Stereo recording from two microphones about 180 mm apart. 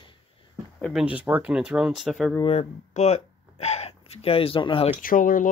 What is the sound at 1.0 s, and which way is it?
Speech, 10° right (ahead or behind).